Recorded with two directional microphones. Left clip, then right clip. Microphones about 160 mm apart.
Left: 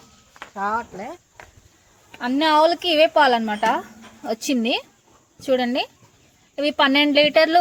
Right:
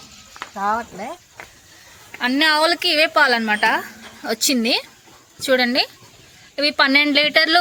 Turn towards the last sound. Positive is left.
turn(degrees=25)  # may be behind; listen again after turning